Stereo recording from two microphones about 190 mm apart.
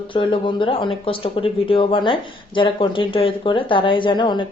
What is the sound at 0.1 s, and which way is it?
Speech, 25° left (ahead or behind).